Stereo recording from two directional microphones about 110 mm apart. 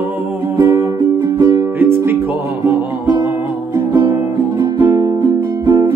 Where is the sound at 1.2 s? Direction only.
30° right (ahead or behind).